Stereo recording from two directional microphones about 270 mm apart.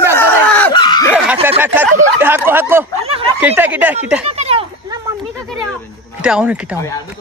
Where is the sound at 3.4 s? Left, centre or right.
Centre.